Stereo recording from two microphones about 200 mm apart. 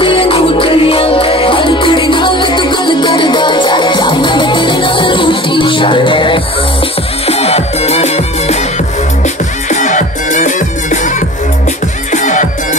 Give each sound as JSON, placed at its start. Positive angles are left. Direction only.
{"t": 0.0, "sound": "music", "side_deg": 25}